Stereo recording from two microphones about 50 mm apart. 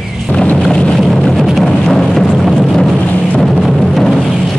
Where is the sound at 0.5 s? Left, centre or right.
Centre.